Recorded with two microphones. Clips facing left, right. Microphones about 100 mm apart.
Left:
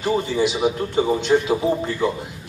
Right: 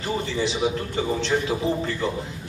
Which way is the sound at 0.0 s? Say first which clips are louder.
Left 6 dB; 15° left (ahead or behind).